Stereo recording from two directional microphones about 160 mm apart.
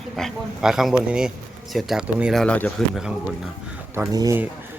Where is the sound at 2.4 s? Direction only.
5° left (ahead or behind).